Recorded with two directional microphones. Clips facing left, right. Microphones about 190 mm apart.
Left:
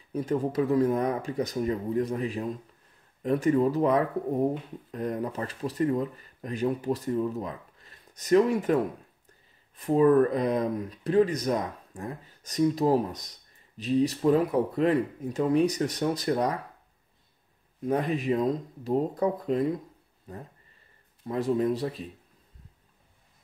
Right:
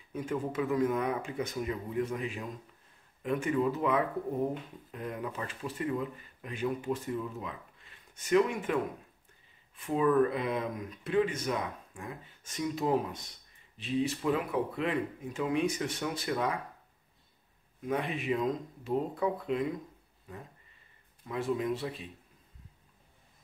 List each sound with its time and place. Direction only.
0.1 s speech: 35° left (ahead or behind)
17.8 s speech: 40° left (ahead or behind)